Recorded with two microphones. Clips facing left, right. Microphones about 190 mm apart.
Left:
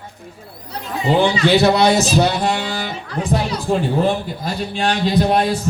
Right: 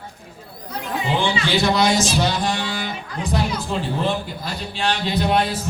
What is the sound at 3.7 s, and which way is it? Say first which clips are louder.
Speech: left 7 dB; 50° left (ahead or behind).